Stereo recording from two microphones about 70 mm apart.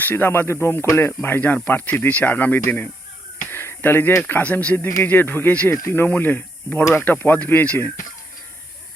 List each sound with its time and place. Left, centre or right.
0.0 s speech: left
3.5 s a sound: left
4.2 s speech: left